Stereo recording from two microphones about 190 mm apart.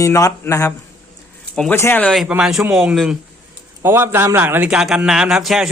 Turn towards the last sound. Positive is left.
turn(degrees=0)  # may be behind; listen again after turning